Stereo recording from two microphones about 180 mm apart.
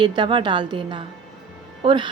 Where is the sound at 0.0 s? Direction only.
25° right (ahead or behind).